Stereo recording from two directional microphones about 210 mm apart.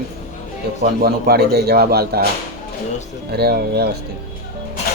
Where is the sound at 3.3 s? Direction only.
50° right (ahead or behind).